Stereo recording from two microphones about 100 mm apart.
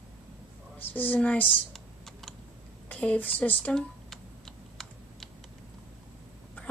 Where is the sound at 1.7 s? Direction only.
5° left (ahead or behind).